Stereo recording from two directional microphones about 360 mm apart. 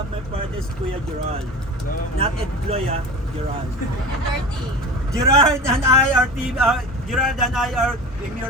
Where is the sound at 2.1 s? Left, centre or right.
Centre.